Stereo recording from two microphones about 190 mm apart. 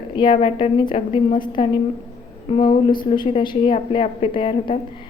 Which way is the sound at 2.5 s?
25° left (ahead or behind).